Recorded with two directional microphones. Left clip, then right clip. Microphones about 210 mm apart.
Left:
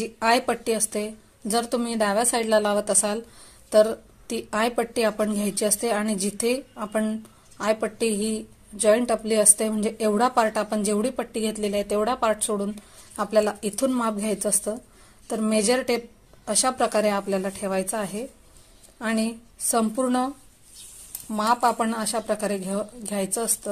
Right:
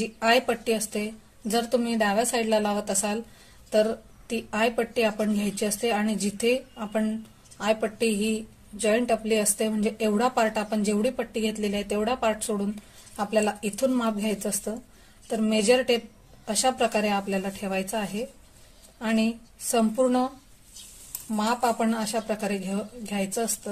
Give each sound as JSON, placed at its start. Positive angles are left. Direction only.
{"t": 0.2, "sound": "speech", "side_deg": 30}
{"t": 18.9, "sound": "a woman's voice", "side_deg": 30}
{"t": 21.3, "sound": "speech", "side_deg": 25}